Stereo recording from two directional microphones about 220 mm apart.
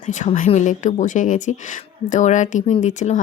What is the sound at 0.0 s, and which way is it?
Speech, 35° left (ahead or behind).